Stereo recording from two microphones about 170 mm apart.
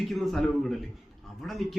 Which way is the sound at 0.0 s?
Centre (ahead or behind).